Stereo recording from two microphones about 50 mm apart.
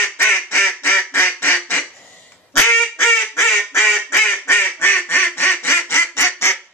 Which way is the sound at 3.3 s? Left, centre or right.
Left.